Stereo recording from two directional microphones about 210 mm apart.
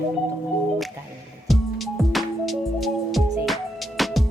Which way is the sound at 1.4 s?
Centre (ahead or behind).